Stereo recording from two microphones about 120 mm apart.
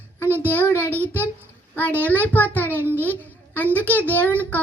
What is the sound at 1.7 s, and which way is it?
A child's voice, 15° left (ahead or behind).